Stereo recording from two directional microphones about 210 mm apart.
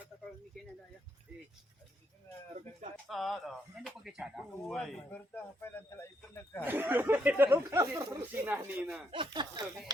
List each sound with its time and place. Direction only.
3.1 s speech: centre (ahead or behind)
6.7 s speech: 10° right (ahead or behind)
9.1 s speech: 20° right (ahead or behind)